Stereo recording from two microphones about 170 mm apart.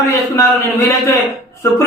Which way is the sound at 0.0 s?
15° left (ahead or behind).